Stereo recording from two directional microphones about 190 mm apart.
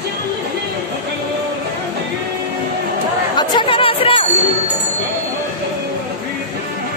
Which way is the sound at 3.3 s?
25° left (ahead or behind).